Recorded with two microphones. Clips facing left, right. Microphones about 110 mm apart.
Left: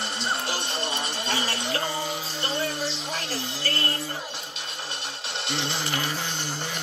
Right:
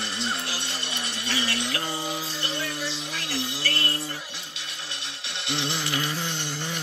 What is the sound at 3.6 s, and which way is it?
Music, 35° left (ahead or behind).